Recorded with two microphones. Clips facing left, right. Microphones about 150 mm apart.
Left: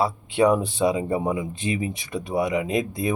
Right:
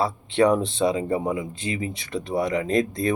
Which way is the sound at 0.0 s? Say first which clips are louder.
Even; 10° left (ahead or behind).